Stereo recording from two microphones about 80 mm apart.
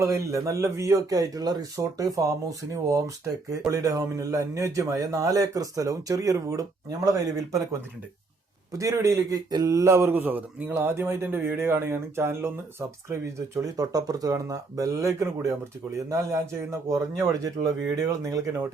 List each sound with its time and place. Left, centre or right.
0.0 s a man's voice: right
8.7 s a man's voice: right
13.6 s speech: right
16.9 s a man's voice: right